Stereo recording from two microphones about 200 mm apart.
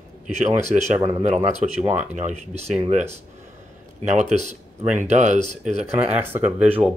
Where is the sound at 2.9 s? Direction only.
35° right (ahead or behind).